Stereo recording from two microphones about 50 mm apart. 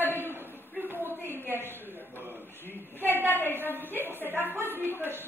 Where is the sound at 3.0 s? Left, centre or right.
Right.